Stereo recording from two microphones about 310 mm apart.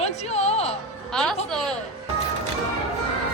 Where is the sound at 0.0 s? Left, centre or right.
Left.